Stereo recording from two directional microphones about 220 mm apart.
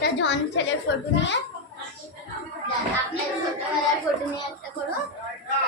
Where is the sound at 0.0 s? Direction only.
55° left (ahead or behind).